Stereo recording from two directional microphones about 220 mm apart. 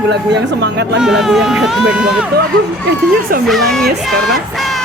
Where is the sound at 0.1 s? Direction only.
50° right (ahead or behind).